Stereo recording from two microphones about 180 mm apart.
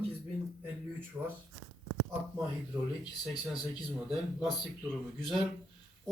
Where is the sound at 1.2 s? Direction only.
20° right (ahead or behind).